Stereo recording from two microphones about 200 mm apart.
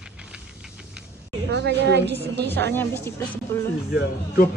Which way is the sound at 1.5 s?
60° right (ahead or behind).